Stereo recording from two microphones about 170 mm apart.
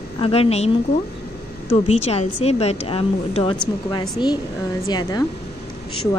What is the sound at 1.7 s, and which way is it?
A woman's voice, 35° left (ahead or behind).